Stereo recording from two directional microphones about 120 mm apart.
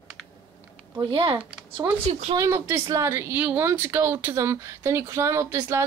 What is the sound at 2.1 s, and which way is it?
Speech, 70° right (ahead or behind).